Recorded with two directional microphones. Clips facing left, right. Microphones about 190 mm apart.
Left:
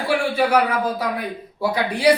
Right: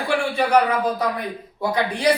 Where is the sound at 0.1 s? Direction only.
5° left (ahead or behind).